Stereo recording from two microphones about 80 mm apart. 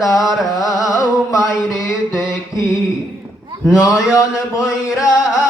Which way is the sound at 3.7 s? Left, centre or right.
Left.